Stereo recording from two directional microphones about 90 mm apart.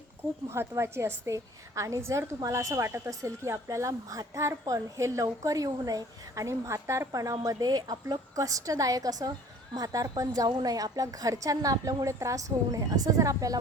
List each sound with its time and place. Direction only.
0.4 s a woman's voice: 30° right (ahead or behind)